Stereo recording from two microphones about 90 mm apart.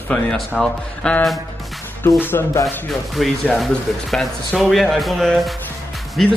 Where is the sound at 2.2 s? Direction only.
25° left (ahead or behind).